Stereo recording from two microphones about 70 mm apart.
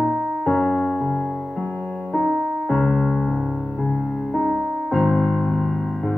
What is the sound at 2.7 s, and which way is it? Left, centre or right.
Keyboard, centre.